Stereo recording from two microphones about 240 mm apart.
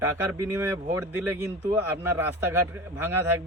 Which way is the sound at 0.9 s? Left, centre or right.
Centre.